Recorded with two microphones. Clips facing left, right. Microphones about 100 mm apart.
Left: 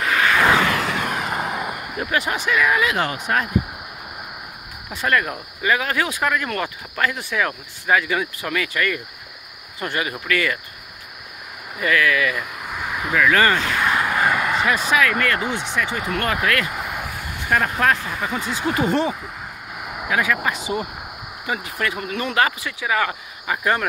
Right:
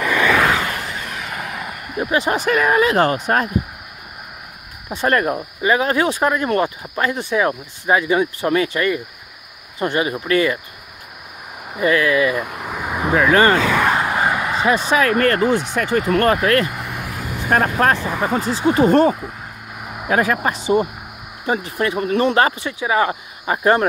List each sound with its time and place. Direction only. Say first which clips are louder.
0.6 s a sound: left 4 dB; 90° left
1.0 s vehicle: left 4 dB; 40° left (ahead or behind); by 1.9 s 25° left (ahead or behind)
2.0 s speech: right 5 dB; 25° right (ahead or behind)
2.3 s speech: right 4 dB; 40° right (ahead or behind)
4.8 s speech: right 4 dB; 35° right (ahead or behind)
11.8 s speech: right 4 dB; 25° right (ahead or behind)
13.8 s vehicle: right 2 dB; 25° right (ahead or behind)
15.7 s speech: right 6 dB; 45° right (ahead or behind); by 18.9 s 30° right (ahead or behind)
18.9 s speech: right 9 dB; 45° right (ahead or behind)
19.8 s a sound: even; 5° right (ahead or behind)
20.1 s speech: right 4 dB; 40° right (ahead or behind)